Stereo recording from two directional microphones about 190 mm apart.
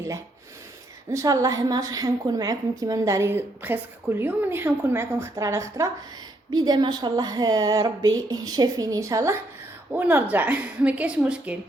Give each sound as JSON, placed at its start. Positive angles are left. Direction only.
{"t": 1.1, "sound": "a woman's voice", "side_deg": -15}